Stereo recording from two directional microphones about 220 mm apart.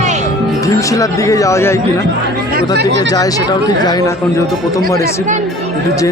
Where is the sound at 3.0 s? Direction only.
15° left (ahead or behind).